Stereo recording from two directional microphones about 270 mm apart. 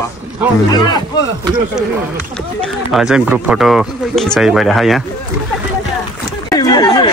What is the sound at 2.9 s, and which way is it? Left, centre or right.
Speech, centre.